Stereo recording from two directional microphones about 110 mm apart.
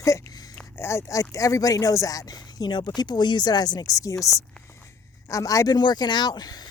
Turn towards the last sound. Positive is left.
turn(degrees=40)  # may be behind; listen again after turning